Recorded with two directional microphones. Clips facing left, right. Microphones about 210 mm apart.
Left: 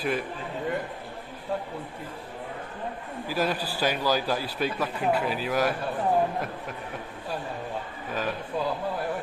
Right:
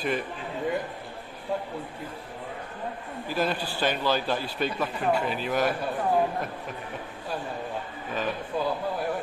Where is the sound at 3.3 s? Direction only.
5° left (ahead or behind).